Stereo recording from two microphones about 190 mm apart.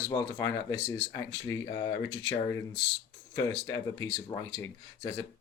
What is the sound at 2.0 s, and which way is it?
Speech, 80° left.